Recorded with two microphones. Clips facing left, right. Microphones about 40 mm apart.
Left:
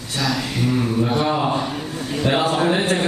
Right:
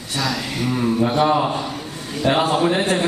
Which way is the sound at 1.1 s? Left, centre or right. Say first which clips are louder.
Right 4 dB; centre.